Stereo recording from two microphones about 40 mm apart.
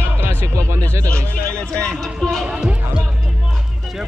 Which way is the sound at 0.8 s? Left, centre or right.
Left.